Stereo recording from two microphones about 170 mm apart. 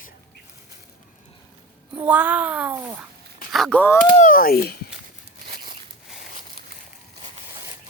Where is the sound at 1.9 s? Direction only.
10° right (ahead or behind).